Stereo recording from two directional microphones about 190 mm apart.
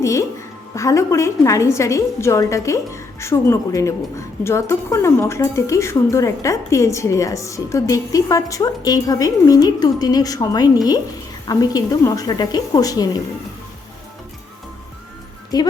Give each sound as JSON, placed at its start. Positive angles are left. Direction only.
{"t": 0.0, "sound": "music", "side_deg": 15}
{"t": 0.8, "sound": "a woman's voice", "side_deg": 15}